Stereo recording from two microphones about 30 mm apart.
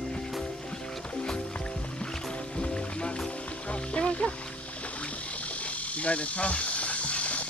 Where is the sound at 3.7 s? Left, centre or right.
Left.